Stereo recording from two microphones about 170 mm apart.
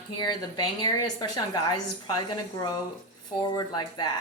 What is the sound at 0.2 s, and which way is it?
Speech, 25° left (ahead or behind).